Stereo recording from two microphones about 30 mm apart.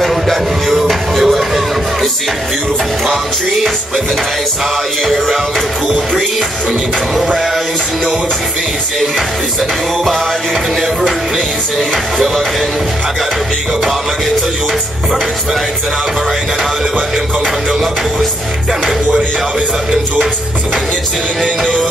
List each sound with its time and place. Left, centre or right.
0.0 s music: centre
5.0 s music: centre